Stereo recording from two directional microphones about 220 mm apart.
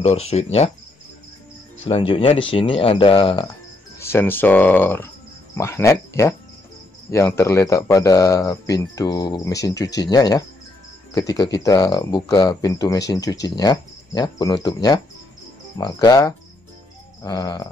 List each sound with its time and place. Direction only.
0.0 s speech: 30° left (ahead or behind)
1.9 s speech: 25° left (ahead or behind)
4.0 s speech: 10° left (ahead or behind)